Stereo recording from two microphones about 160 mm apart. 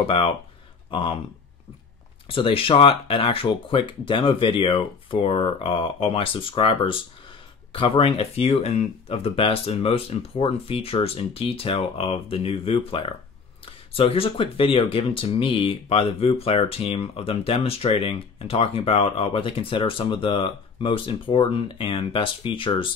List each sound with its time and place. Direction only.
0.0 s speech: 35° left (ahead or behind)
2.2 s speech: 35° left (ahead or behind)